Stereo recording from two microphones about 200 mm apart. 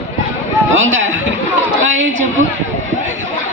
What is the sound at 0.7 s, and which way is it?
A man's voice, 70° right (ahead or behind).